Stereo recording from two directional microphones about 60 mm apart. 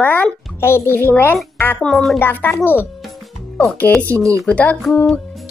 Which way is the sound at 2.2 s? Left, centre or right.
Left.